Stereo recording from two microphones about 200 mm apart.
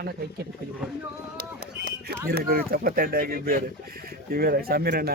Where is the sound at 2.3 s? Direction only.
50° right (ahead or behind).